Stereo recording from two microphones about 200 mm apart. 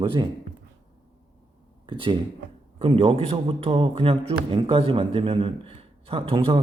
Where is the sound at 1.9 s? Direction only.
25° right (ahead or behind).